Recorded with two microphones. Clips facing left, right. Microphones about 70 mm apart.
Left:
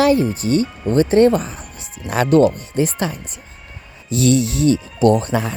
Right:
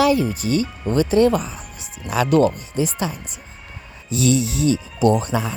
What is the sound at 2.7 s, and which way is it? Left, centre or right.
Speech, left.